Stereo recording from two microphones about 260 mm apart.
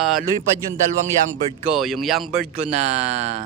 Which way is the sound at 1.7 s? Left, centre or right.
Centre.